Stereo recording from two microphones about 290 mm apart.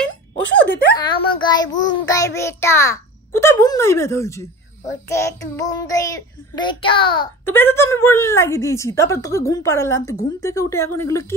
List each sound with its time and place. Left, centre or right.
0.9 s child singing: centre